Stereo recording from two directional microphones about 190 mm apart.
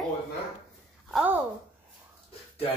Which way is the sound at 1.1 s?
10° right (ahead or behind).